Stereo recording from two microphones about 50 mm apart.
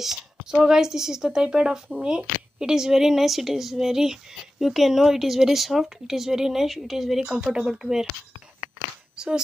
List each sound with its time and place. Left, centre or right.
0.0 s a woman's voice: centre
7.3 s a woman's voice: centre
9.1 s a sound: centre